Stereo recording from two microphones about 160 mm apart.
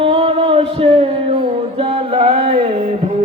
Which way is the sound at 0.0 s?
35° right (ahead or behind).